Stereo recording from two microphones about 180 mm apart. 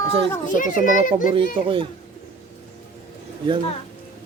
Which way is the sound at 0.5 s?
45° left (ahead or behind).